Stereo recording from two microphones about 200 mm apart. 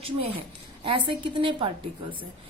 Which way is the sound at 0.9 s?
25° right (ahead or behind).